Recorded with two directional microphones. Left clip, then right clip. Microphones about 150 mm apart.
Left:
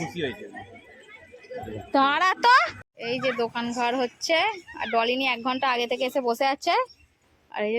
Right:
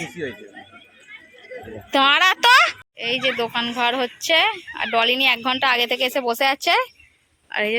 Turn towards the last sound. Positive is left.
turn(degrees=0)  # may be behind; listen again after turning